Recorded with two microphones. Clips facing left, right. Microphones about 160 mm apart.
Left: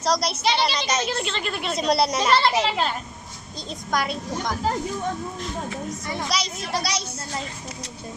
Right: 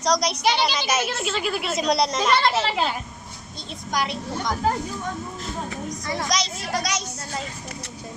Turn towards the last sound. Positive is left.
turn(degrees=30)  # may be behind; listen again after turning